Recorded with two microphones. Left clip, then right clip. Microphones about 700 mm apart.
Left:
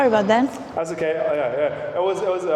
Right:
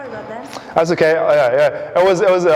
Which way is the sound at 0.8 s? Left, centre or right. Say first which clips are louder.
Right 9 dB; right.